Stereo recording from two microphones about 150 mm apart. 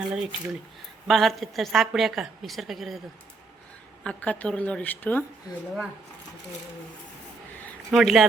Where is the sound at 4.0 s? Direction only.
10° left (ahead or behind).